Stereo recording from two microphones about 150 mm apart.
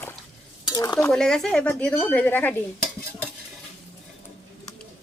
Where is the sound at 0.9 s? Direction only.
5° left (ahead or behind).